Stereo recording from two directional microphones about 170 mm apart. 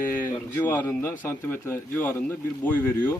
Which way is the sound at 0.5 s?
10° left (ahead or behind).